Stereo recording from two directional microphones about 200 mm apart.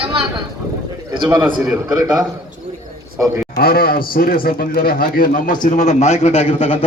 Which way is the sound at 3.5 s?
45° left (ahead or behind).